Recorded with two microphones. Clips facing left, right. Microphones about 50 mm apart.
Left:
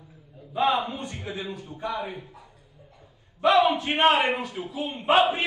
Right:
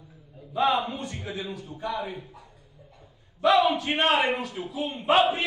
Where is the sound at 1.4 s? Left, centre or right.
Left.